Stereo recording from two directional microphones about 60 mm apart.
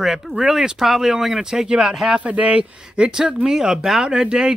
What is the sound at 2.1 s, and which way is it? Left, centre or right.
Speech, right.